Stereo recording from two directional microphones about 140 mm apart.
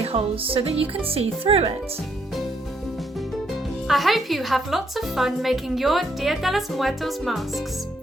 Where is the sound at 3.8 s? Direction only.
Centre (ahead or behind).